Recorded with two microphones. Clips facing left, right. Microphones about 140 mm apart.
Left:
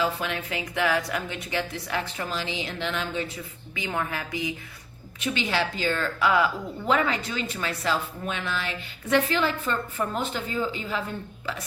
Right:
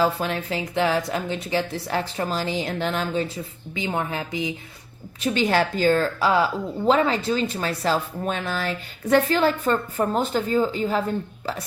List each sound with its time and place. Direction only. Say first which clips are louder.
0.0 s a woman's voice: right 5 dB; 35° right (ahead or behind)
3.8 s a woman's voice: right 4 dB; 25° right (ahead or behind)
5.2 s a woman's voice: right 6 dB; 40° right (ahead or behind)